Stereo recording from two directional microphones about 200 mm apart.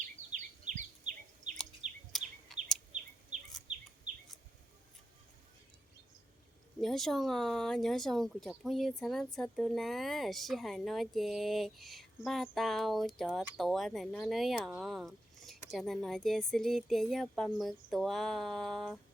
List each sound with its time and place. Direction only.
0.0 s a sound: 35° right (ahead or behind)
1.8 s chirp: 5° right (ahead or behind)
2.5 s bird: centre (ahead or behind)
6.8 s speech: centre (ahead or behind)